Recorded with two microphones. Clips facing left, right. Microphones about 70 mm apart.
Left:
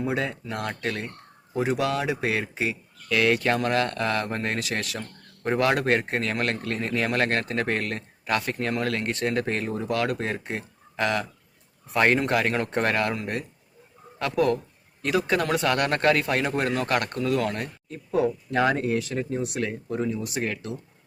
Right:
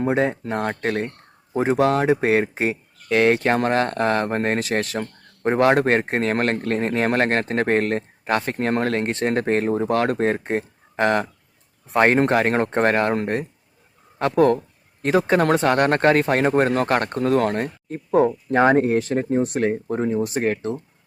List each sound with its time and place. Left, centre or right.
0.0 s speech: right